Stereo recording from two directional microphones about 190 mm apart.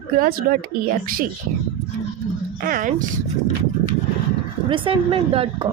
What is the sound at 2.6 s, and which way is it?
Speech, 45° right (ahead or behind).